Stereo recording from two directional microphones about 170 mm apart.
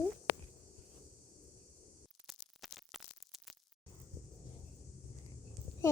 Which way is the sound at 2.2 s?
Centre (ahead or behind).